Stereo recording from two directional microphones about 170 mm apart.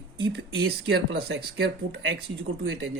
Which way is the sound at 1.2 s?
70° right (ahead or behind).